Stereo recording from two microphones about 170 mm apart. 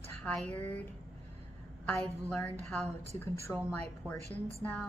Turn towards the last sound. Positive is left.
turn(degrees=10)  # may be behind; listen again after turning